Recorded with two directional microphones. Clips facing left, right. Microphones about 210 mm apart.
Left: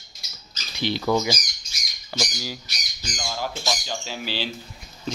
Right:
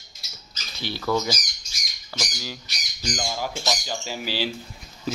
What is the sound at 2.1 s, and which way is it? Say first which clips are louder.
Squawk: left 4 dB; 25° left (ahead or behind).